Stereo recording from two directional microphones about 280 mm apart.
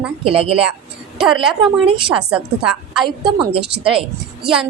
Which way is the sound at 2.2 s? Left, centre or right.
Centre.